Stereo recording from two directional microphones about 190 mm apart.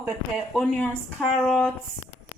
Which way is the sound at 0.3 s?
Centre (ahead or behind).